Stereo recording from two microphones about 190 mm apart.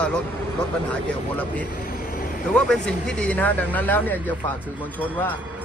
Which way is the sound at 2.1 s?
45° left (ahead or behind).